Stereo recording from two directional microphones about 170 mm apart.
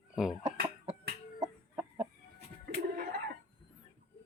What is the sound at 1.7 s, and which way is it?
Chicken, 10° right (ahead or behind).